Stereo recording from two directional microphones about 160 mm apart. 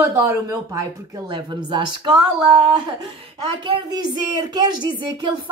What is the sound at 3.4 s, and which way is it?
Speech, 30° right (ahead or behind).